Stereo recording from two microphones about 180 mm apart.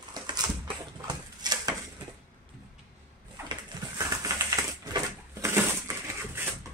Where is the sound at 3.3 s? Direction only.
20° right (ahead or behind).